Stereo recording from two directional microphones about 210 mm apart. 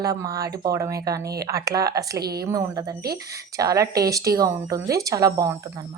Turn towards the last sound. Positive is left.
turn(degrees=-15)  # may be behind; listen again after turning